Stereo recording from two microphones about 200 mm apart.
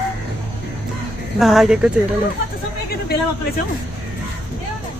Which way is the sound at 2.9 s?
50° left (ahead or behind).